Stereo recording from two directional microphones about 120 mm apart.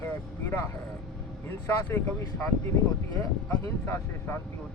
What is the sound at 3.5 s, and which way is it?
Speech, 15° left (ahead or behind).